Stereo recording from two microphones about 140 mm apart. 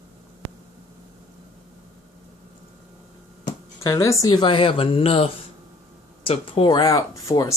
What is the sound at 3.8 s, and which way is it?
Speech, 25° left (ahead or behind).